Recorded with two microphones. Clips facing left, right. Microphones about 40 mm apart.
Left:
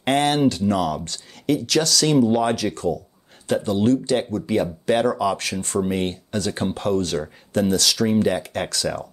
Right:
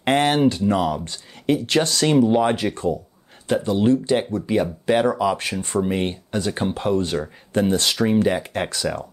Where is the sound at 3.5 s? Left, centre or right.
Centre; by 8.0 s right.